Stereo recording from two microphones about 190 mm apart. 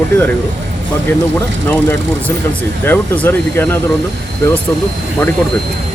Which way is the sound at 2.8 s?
10° left (ahead or behind).